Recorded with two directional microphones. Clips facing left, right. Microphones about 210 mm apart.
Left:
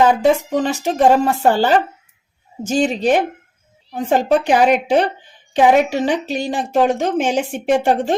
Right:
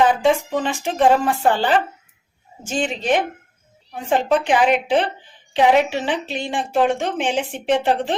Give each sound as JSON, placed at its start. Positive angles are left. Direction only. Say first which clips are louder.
{"t": 0.0, "sound": "a woman's voice", "louder": "left 3 dB", "side_deg": 40}